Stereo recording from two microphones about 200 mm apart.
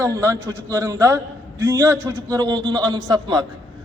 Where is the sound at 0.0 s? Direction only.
15° right (ahead or behind).